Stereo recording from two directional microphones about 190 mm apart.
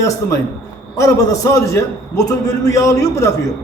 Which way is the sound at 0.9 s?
15° left (ahead or behind).